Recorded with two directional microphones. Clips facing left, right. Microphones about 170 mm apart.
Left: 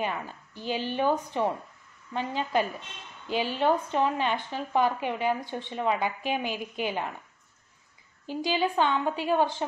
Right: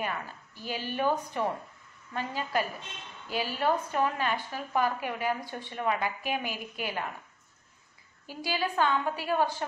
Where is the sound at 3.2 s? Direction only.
5° right (ahead or behind).